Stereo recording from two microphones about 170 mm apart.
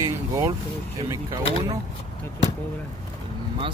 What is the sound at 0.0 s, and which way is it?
Vehicle, 20° right (ahead or behind).